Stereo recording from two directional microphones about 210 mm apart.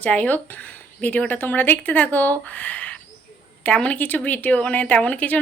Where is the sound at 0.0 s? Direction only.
5° left (ahead or behind).